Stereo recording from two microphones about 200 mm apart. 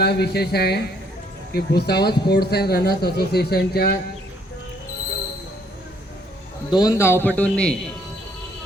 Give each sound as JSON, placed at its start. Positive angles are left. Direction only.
{"t": 0.0, "sound": "speech", "side_deg": 55}
{"t": 6.7, "sound": "a man's voice", "side_deg": 20}